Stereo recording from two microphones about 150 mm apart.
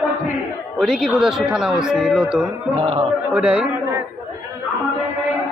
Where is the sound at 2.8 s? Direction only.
40° right (ahead or behind).